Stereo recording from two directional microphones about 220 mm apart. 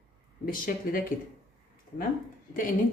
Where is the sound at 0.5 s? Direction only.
40° left (ahead or behind).